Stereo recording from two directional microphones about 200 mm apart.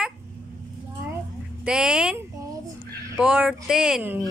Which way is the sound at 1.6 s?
5° right (ahead or behind).